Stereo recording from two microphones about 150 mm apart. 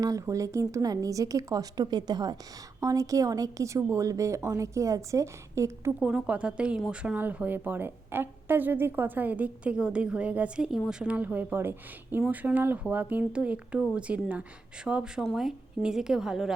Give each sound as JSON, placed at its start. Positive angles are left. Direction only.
{"t": 0.0, "sound": "a woman's voice", "side_deg": -20}
{"t": 6.0, "sound": "a woman's voice", "side_deg": -5}